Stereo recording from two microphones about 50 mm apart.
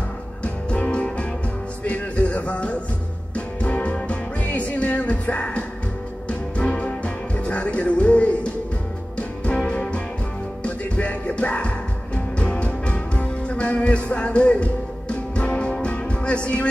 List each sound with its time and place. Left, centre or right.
0.4 s music: left
1.9 s a sound: left
3.3 s music: left